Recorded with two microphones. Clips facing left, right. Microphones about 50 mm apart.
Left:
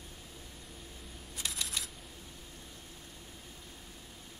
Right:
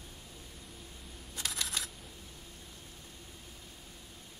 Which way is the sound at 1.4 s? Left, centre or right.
Right.